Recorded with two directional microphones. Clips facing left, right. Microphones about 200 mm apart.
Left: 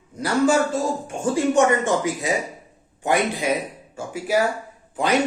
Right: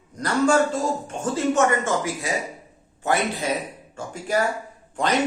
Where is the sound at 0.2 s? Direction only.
10° left (ahead or behind).